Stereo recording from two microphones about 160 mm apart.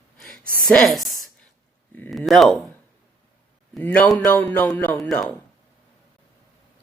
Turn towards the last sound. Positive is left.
turn(degrees=5)  # may be behind; listen again after turning